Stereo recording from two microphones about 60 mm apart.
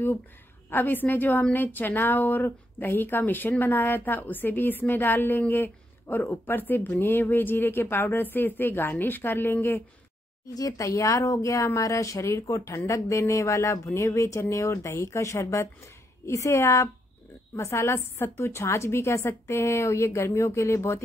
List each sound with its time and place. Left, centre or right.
0.7 s speech: left
10.5 s a woman's voice: left